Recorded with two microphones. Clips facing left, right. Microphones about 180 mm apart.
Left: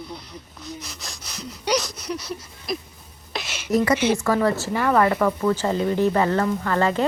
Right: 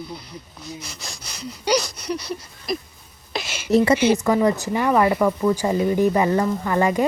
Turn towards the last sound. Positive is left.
turn(degrees=-15)  # may be behind; listen again after turning